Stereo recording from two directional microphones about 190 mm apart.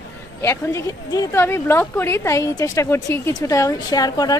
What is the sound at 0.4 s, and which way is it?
Speech, 15° left (ahead or behind).